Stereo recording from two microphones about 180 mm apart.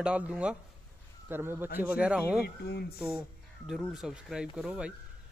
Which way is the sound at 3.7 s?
Centre (ahead or behind).